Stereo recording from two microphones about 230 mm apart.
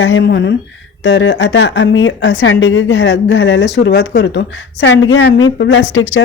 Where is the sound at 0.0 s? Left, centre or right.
Left.